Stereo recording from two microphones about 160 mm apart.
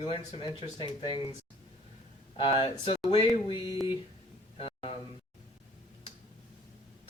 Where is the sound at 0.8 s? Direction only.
30° left (ahead or behind).